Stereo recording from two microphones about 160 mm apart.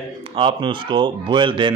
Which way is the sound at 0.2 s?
30° right (ahead or behind).